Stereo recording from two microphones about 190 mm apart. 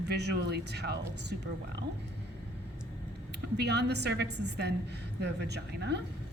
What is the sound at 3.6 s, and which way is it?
A woman's voice, 60° right (ahead or behind).